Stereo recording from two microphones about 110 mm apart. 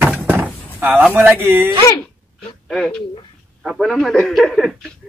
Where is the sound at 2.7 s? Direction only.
5° left (ahead or behind).